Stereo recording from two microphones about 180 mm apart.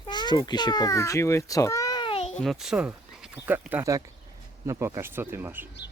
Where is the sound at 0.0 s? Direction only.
25° left (ahead or behind).